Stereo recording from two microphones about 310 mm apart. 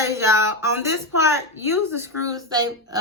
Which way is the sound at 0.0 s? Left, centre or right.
Centre.